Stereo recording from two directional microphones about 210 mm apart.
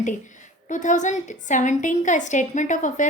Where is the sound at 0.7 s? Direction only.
35° left (ahead or behind).